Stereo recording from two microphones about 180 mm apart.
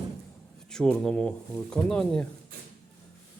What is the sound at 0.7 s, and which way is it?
Speech, 5° left (ahead or behind).